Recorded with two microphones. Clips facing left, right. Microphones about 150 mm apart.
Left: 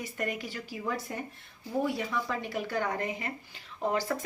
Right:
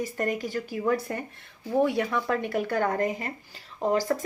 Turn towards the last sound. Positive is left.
turn(degrees=-40)  # may be behind; listen again after turning